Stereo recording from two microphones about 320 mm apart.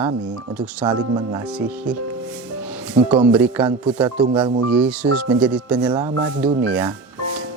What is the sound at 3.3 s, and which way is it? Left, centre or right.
Speech, centre.